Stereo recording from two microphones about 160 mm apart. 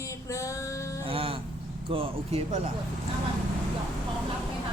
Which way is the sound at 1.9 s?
35° right (ahead or behind).